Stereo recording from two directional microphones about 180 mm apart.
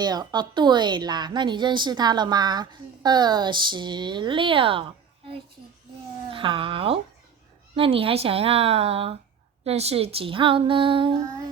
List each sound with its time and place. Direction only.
0.0 s a woman's voice: 20° right (ahead or behind)
6.3 s a woman's voice: 30° right (ahead or behind)